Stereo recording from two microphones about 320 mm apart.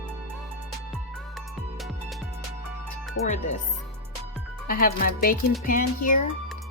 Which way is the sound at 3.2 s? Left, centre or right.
Left.